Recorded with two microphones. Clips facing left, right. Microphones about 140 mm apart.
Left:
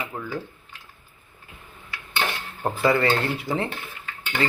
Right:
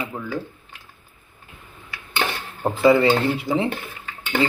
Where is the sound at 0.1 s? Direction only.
10° right (ahead or behind).